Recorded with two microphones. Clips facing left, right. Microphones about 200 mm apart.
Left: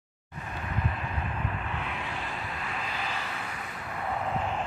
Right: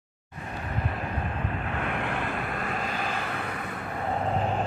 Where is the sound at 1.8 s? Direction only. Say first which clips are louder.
Right 6 dB; 55° right (ahead or behind).